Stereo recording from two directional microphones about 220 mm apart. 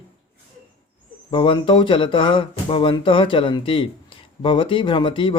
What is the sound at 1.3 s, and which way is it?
Speech, 25° left (ahead or behind).